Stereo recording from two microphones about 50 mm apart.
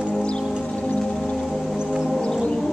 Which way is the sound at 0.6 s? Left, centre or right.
Left.